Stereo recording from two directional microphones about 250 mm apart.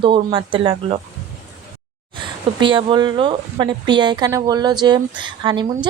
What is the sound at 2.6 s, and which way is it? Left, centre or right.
Speech, centre.